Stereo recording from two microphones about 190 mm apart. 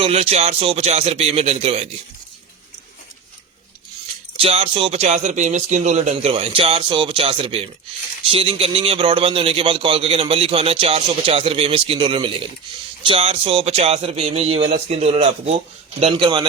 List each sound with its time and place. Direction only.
0.0 s speech: 35° right (ahead or behind)
4.4 s a man's voice: 30° right (ahead or behind)